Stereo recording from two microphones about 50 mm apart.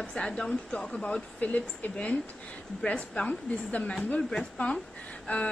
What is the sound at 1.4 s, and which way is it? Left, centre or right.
A woman's voice, left.